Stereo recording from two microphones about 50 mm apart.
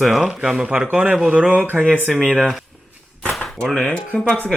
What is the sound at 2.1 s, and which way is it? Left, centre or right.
Speech, centre.